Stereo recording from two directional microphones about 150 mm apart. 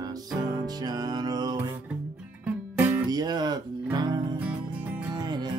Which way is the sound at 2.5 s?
10° right (ahead or behind).